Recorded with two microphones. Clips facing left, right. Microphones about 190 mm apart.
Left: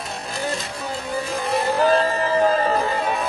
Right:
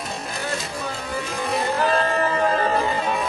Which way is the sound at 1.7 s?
35° left (ahead or behind).